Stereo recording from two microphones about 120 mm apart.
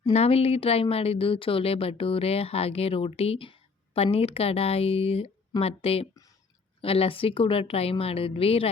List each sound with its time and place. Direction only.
0.1 s a woman's voice: 60° left (ahead or behind)